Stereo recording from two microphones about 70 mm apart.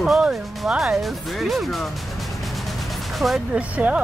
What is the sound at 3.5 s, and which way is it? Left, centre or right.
Speech, centre.